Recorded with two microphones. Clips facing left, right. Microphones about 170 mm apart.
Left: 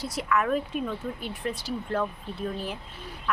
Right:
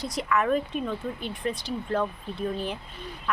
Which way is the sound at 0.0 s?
5° left (ahead or behind).